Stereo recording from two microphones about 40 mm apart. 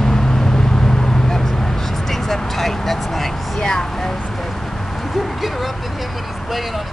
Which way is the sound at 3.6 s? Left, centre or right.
Centre.